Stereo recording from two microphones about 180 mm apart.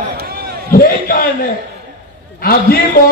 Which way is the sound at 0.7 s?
55° left (ahead or behind).